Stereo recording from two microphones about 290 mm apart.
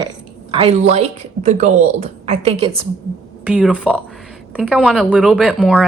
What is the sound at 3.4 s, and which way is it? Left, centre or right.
Speech, centre.